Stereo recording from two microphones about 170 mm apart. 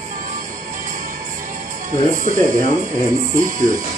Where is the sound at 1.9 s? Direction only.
50° right (ahead or behind).